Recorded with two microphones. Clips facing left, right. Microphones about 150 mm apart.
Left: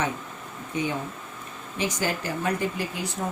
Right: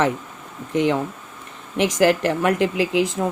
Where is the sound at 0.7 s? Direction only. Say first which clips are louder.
Right 9 dB; 85° right.